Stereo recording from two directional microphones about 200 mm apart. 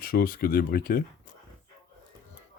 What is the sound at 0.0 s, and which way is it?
Speech, 45° left (ahead or behind).